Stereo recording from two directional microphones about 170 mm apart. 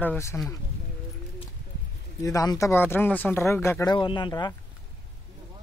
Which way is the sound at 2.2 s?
20° left (ahead or behind).